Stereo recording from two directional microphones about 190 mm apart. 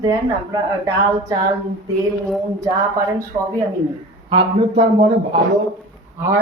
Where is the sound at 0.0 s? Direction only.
20° right (ahead or behind).